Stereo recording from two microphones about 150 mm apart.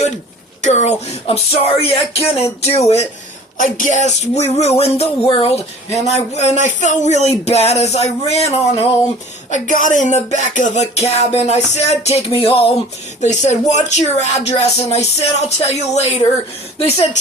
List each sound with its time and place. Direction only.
0.6 s speech: 50° left (ahead or behind)
3.6 s speech: 60° left (ahead or behind); by 8.9 s 40° left (ahead or behind)
9.8 s speech: 55° left (ahead or behind)
12.4 s a sound: 40° left (ahead or behind)
13.2 s speech: 50° left (ahead or behind)